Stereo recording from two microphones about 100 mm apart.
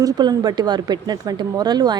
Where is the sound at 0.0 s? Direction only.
40° right (ahead or behind).